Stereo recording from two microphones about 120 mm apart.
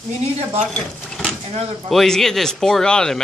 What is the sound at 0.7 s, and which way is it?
Sewing machine, 5° left (ahead or behind).